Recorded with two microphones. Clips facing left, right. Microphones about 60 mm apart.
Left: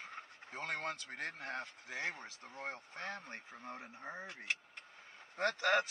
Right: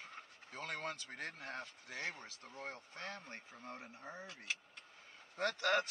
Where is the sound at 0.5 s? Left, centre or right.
Left.